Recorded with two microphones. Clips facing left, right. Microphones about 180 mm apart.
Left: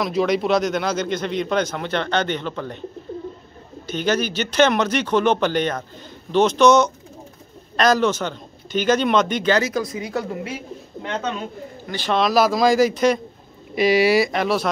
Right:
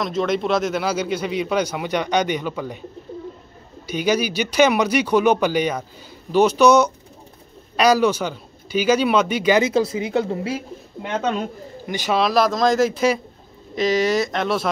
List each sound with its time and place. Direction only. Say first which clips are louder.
0.0 s speech: left 1 dB; 5° left (ahead or behind)
3.8 s speech: right 1 dB; 10° right (ahead or behind)
9.7 s speech: right 5 dB; 25° right (ahead or behind)
11.8 s speech: right 3 dB; 15° right (ahead or behind)
12.1 s speech: left 1 dB; centre (ahead or behind)
13.7 s speech: left 3 dB; 10° left (ahead or behind)